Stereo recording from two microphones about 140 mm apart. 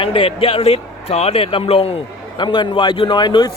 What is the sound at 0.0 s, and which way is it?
Speech, 40° left (ahead or behind).